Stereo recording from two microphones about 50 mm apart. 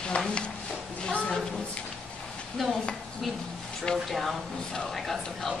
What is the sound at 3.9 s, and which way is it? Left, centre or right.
Speech, centre.